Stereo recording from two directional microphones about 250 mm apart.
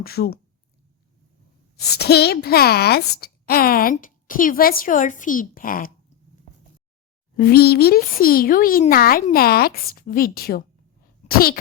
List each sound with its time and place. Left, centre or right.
0.0 s a woman's voice: left
1.8 s a woman's voice: left
7.3 s a woman's voice: left